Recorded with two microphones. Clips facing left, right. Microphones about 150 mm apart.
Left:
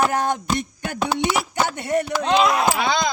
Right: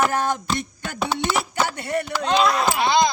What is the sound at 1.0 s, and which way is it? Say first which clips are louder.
Speech: left 1 dB; 15° left (ahead or behind).